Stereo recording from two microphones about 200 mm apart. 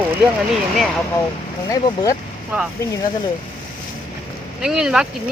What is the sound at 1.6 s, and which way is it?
Speech, 15° left (ahead or behind).